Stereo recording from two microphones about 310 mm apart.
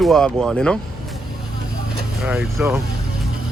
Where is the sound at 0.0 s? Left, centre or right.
Centre.